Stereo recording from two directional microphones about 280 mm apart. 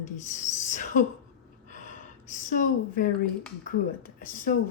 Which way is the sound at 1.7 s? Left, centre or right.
Left.